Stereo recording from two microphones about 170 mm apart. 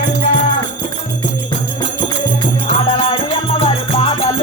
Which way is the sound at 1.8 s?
30° left (ahead or behind).